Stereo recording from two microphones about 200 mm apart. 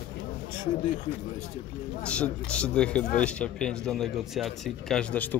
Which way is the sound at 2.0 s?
5° left (ahead or behind).